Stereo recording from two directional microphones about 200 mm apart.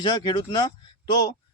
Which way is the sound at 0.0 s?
25° left (ahead or behind).